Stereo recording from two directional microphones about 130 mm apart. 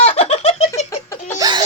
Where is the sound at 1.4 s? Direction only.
30° right (ahead or behind).